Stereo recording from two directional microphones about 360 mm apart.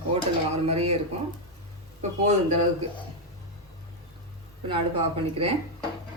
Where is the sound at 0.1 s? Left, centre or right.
Centre.